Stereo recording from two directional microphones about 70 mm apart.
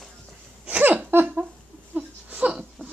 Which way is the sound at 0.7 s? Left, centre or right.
Right.